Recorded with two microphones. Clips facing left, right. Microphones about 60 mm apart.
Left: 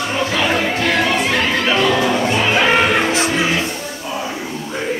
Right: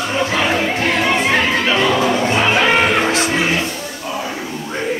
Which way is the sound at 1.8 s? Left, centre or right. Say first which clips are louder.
Even; right.